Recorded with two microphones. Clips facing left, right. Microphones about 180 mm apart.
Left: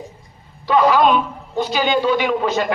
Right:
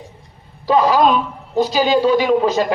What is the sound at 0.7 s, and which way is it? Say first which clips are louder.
Speech: right 1 dB; 40° right (ahead or behind).